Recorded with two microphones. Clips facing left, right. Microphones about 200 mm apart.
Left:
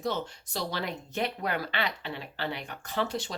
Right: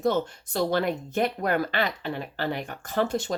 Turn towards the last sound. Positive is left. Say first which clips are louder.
# right 5 dB
turn(degrees=-50)  # may be behind; listen again after turning